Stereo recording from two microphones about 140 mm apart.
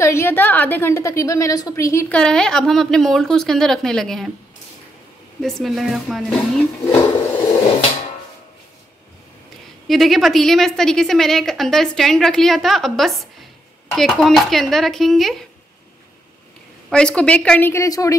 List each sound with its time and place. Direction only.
0.0 s a woman's voice: 20° left (ahead or behind)
2.0 s a woman's voice: 5° left (ahead or behind)
5.4 s a woman's voice: centre (ahead or behind)
9.8 s a woman's voice: centre (ahead or behind)
16.9 s a woman's voice: 5° left (ahead or behind); by 18.1 s 25° left (ahead or behind)